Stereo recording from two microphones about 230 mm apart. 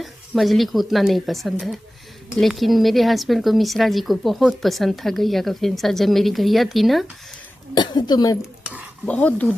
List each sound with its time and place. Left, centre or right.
0.0 s speech: centre
7.8 s a woman's voice: centre
8.4 s speech: centre
9.0 s speech: centre